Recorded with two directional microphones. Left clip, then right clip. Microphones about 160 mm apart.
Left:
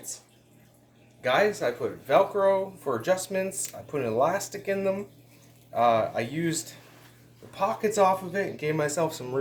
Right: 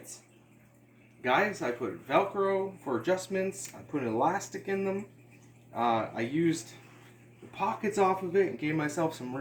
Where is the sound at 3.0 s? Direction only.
75° left (ahead or behind).